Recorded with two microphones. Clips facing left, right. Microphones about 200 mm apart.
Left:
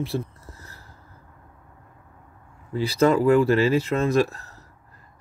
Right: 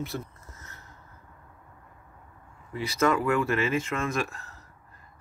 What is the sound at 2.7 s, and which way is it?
Speech, 30° left (ahead or behind).